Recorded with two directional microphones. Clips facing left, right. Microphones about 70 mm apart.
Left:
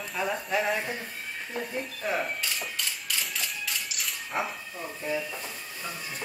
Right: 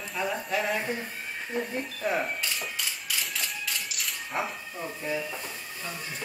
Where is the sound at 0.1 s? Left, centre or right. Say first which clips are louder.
Left 1 dB; centre.